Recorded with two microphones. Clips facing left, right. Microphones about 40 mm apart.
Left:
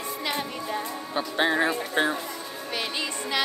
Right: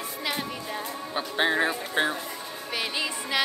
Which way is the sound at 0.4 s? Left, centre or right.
Centre.